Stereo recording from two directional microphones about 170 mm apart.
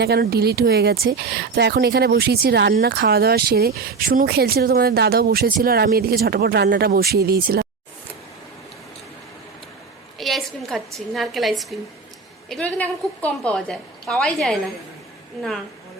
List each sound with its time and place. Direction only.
0.0 s speech: 70° right (ahead or behind)
10.2 s a sound: centre (ahead or behind)
12.5 s a woman's voice: 5° left (ahead or behind)